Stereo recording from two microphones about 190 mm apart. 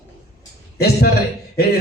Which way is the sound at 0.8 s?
55° left (ahead or behind).